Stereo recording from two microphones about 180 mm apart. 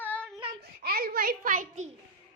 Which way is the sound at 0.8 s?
60° right (ahead or behind).